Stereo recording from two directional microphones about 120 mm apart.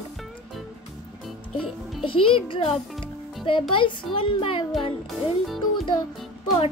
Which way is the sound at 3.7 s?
45° left (ahead or behind).